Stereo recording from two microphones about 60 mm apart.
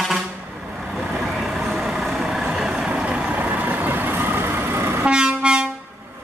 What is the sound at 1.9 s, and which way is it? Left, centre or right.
Vehicle, centre.